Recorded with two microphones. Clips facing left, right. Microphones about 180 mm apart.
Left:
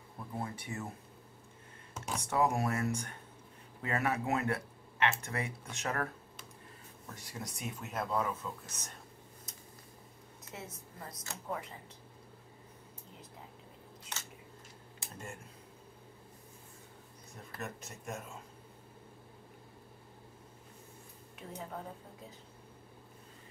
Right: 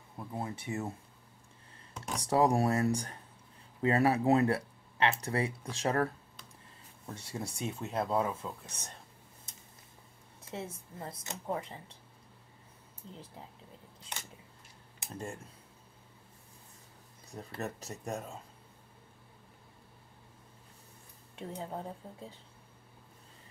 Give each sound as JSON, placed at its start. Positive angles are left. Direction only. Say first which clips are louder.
{"t": 0.4, "sound": "speech", "louder": "right 4 dB", "side_deg": -25}
{"t": 2.0, "sound": "computer keyboard", "louder": "even", "side_deg": 5}
{"t": 2.2, "sound": "speech", "louder": "right 5 dB", "side_deg": -35}
{"t": 7.2, "sound": "speech", "louder": "right 6 dB", "side_deg": -30}
{"t": 10.5, "sound": "speech", "louder": "right 6 dB", "side_deg": -30}
{"t": 17.3, "sound": "speech", "louder": "right 5 dB", "side_deg": -35}
{"t": 21.4, "sound": "speech", "louder": "right 4 dB", "side_deg": -30}